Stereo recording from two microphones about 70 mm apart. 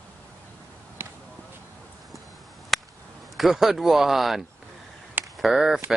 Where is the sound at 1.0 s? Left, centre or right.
Right.